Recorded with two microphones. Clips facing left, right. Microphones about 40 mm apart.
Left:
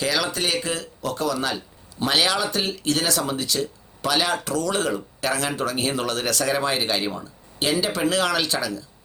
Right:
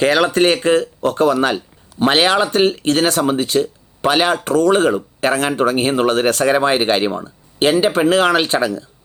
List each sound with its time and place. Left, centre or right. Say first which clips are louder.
0.0 s speech: right 10 dB; right